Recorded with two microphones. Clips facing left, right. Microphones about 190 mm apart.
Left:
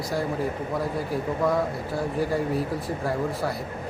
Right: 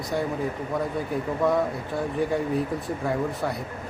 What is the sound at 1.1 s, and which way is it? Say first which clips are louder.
Speech: right 1 dB; centre (ahead or behind).